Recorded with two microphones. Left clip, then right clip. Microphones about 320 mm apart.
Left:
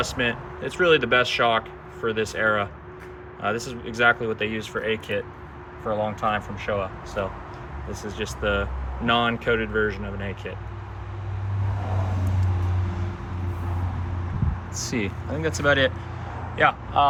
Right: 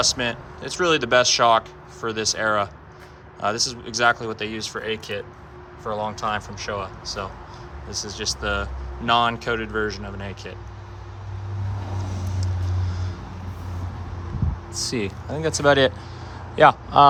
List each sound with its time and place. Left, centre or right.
0.6 s speech: centre
7.9 s speech: centre
8.2 s speech: centre
14.8 s a man's voice: centre